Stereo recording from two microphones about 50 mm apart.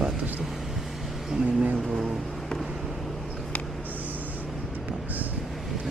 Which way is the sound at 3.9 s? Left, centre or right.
Right.